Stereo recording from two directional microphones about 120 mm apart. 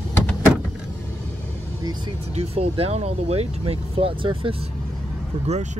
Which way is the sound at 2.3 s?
55° right (ahead or behind).